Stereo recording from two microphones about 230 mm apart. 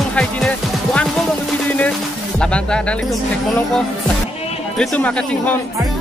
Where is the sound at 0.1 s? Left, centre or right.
Centre.